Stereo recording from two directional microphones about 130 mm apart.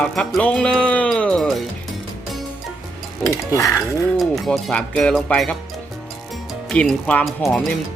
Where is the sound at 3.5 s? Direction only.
25° left (ahead or behind).